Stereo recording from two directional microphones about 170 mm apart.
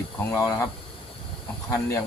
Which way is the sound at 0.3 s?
20° left (ahead or behind).